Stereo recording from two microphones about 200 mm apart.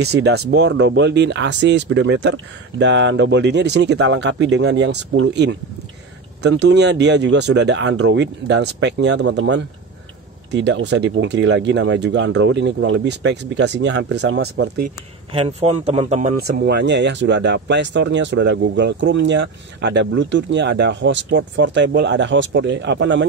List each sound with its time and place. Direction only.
0.0 s speech: 55° right (ahead or behind)
15.3 s speech: 30° right (ahead or behind)
16.3 s speech: 50° right (ahead or behind)